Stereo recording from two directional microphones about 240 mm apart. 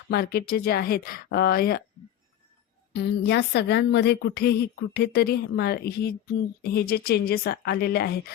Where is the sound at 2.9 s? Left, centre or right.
Left.